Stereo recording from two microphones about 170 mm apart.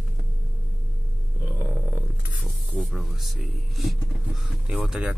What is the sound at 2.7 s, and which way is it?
Speech, centre (ahead or behind).